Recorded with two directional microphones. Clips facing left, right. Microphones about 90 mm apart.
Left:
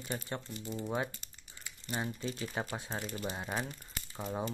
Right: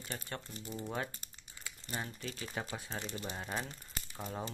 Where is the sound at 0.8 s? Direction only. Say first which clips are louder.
Left 4 dB; 15° left (ahead or behind).